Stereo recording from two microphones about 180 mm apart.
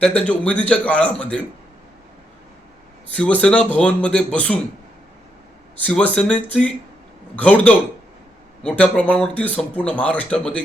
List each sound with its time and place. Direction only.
0.0 s speech: 5° left (ahead or behind)
3.2 s speech: 5° left (ahead or behind)
5.7 s speech: 10° left (ahead or behind)